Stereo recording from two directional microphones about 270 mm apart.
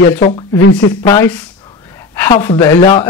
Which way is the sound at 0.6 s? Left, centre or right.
Left.